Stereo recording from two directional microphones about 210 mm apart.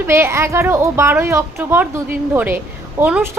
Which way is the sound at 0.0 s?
10° right (ahead or behind).